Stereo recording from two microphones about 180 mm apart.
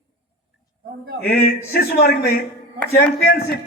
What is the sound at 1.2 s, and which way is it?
A man's voice, 60° left (ahead or behind).